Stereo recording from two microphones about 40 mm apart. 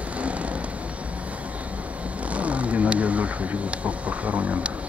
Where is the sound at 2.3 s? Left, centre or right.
Right.